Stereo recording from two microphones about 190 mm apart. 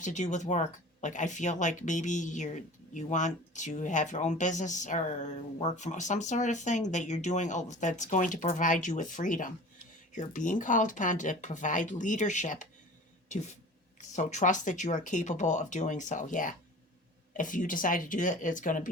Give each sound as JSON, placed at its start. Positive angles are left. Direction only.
{"t": 0.0, "sound": "speech", "side_deg": 40}